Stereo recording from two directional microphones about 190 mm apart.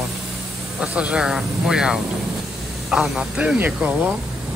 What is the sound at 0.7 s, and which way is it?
Speech, 5° right (ahead or behind).